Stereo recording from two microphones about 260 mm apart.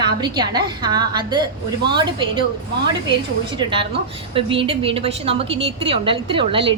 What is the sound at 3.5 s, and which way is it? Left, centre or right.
A woman's voice, centre.